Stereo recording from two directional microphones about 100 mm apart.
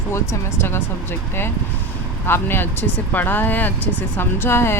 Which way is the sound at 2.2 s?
20° left (ahead or behind).